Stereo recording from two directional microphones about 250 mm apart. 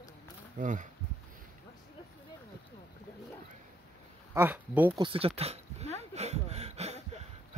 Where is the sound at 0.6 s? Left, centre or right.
Right.